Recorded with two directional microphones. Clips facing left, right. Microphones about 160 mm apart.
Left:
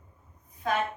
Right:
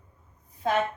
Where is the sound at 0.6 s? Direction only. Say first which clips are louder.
Right 3 dB; 30° right (ahead or behind).